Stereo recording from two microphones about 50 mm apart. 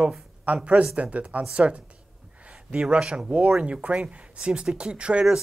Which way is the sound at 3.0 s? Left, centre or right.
Centre.